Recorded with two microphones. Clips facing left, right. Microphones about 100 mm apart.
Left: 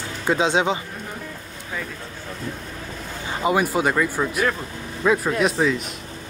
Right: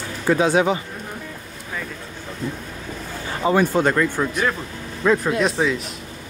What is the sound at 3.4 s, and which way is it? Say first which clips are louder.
Speech: right 2 dB; 10° left (ahead or behind).